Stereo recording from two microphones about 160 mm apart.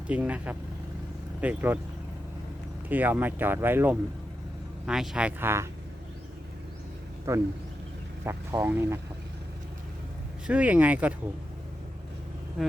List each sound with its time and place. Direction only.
0.1 s speech: 10° right (ahead or behind)
2.9 s speech: 10° right (ahead or behind)
7.3 s speech: 20° right (ahead or behind)
10.4 s speech: 10° right (ahead or behind)